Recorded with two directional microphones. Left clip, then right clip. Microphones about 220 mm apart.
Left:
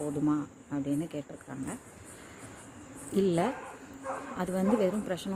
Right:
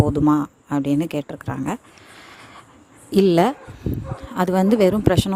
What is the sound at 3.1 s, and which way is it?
Speech, 45° right (ahead or behind).